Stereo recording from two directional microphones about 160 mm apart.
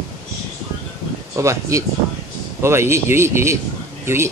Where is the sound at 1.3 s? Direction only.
20° right (ahead or behind).